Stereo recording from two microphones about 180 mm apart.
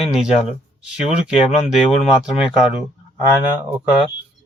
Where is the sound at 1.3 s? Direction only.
35° left (ahead or behind).